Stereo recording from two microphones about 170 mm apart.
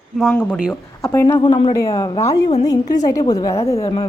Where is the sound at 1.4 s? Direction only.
30° left (ahead or behind).